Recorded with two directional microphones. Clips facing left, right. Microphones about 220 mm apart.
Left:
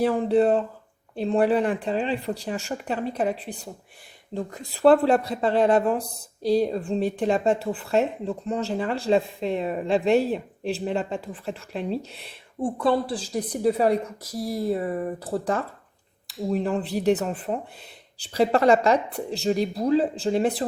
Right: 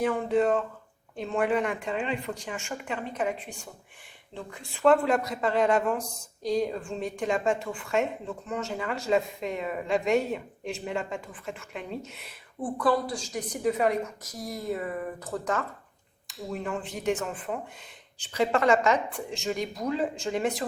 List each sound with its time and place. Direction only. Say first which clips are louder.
0.0 s speech: left 5 dB; 35° left (ahead or behind)